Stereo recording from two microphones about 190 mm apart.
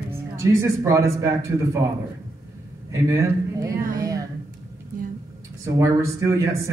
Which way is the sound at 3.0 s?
15° right (ahead or behind).